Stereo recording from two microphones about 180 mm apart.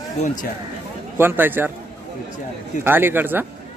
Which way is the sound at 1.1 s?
10° right (ahead or behind).